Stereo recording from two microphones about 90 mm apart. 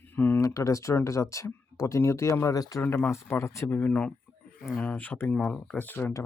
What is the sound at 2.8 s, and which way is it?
Speech, 20° left (ahead or behind).